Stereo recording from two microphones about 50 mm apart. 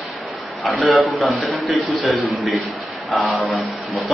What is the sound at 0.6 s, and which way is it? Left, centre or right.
A man's voice, centre.